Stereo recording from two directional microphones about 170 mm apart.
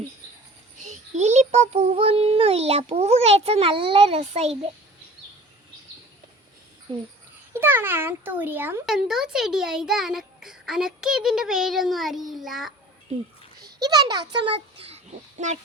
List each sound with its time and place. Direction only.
0.8 s a child's voice: 45° right (ahead or behind)
6.9 s speech: 30° right (ahead or behind)
7.6 s a child's voice: 15° right (ahead or behind)
13.8 s a child's voice: 25° right (ahead or behind); by 15.5 s 40° right (ahead or behind)